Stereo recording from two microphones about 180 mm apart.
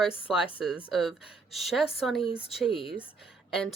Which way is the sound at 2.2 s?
30° left (ahead or behind).